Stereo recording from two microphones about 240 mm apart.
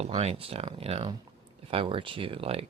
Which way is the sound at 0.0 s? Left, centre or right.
Right.